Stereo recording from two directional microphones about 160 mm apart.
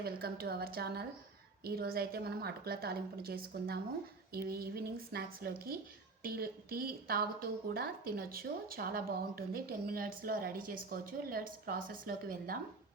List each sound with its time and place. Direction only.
0.0 s a woman's voice: 75° right (ahead or behind)